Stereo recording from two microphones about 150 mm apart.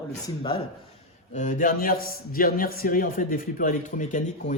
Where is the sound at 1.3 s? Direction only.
55° left (ahead or behind).